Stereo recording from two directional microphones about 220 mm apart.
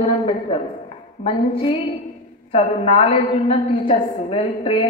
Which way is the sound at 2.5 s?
25° left (ahead or behind).